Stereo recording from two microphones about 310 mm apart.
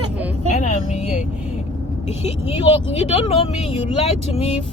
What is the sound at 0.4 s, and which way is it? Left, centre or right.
Vehicle, left.